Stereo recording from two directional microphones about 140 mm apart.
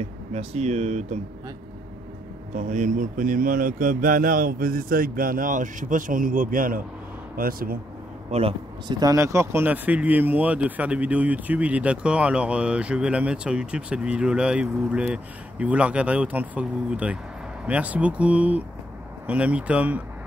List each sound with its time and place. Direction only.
0.0 s speech: 45° right (ahead or behind)
2.5 s speech: 65° right (ahead or behind); by 7.8 s 90° right
8.3 s speech: 45° right (ahead or behind)
8.8 s speech: 25° right (ahead or behind)